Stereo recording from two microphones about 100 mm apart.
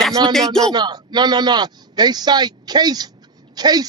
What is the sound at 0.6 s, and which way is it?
A man's voice, 45° right (ahead or behind).